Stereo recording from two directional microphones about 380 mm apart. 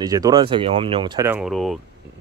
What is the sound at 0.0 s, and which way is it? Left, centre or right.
Speech, centre.